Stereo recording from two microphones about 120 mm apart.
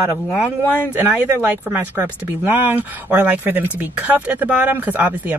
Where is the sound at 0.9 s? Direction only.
10° right (ahead or behind).